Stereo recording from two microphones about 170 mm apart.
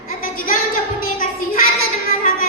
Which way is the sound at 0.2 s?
55° left (ahead or behind).